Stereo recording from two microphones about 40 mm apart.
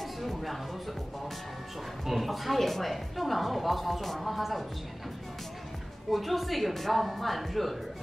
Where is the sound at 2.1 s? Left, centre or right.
Centre.